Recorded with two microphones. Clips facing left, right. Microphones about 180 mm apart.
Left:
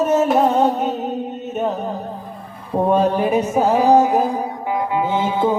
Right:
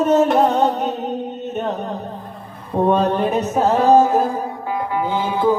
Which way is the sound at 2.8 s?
10° left (ahead or behind).